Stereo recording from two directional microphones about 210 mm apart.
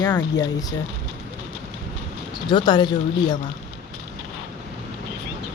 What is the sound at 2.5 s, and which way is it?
Speech, 20° left (ahead or behind).